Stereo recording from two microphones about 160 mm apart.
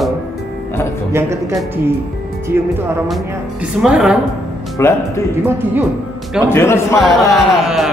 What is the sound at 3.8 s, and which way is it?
Speech, 5° right (ahead or behind).